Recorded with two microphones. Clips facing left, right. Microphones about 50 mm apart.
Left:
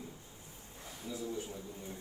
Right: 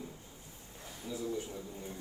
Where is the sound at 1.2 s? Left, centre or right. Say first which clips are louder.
Right 3 dB; right.